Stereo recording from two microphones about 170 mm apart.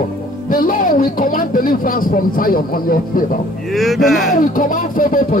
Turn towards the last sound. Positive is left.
turn(degrees=55)  # may be behind; listen again after turning